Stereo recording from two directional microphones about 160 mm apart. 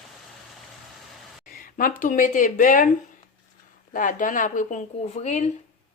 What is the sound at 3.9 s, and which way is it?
Speech, 55° left (ahead or behind).